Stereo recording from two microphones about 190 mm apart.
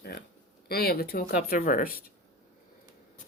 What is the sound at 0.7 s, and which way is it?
Speech, 55° left (ahead or behind).